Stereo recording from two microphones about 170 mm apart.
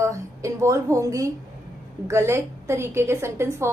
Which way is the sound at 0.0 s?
15° right (ahead or behind).